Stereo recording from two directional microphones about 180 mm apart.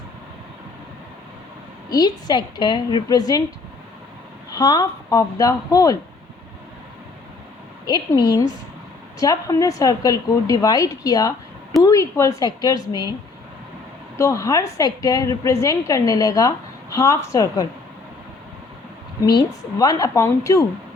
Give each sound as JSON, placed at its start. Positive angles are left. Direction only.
{"t": 1.9, "sound": "a woman's voice", "side_deg": 20}
{"t": 4.5, "sound": "a woman's voice", "side_deg": 20}
{"t": 7.9, "sound": "a woman's voice", "side_deg": 20}
{"t": 14.2, "sound": "a woman's voice", "side_deg": 15}
{"t": 19.2, "sound": "a woman's voice", "side_deg": 20}